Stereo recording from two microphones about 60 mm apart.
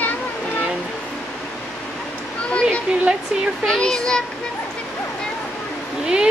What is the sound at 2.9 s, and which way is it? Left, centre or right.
Speech, centre.